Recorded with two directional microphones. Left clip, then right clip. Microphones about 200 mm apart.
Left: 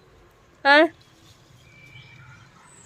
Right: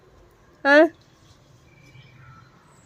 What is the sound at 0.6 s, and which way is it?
Speech, 25° right (ahead or behind).